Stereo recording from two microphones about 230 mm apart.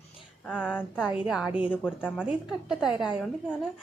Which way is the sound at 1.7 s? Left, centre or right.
Centre.